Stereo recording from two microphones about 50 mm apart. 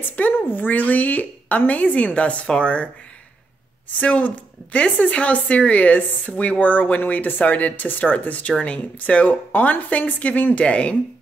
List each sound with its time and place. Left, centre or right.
0.1 s a woman's voice: left
4.0 s a woman's voice: left